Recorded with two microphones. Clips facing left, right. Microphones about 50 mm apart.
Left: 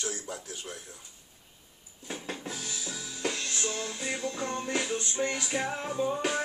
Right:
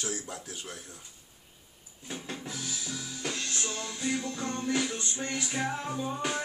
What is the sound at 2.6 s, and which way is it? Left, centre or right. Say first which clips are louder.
Music: right 1 dB; centre.